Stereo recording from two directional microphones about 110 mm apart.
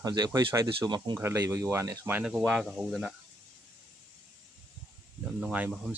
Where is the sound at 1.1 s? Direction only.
30° right (ahead or behind).